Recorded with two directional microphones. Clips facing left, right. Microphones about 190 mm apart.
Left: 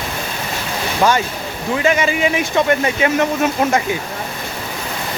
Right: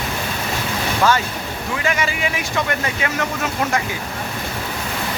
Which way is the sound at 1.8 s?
20° left (ahead or behind).